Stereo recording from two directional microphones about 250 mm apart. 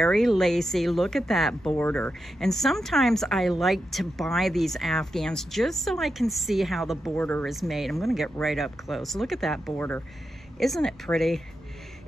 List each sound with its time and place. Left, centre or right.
0.0 s speech: centre